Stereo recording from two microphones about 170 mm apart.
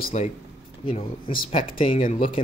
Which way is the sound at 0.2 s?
40° left (ahead or behind).